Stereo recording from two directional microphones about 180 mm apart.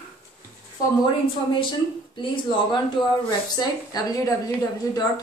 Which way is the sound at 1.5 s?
25° left (ahead or behind).